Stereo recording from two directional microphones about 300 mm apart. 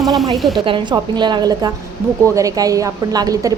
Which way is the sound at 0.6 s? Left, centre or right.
Centre.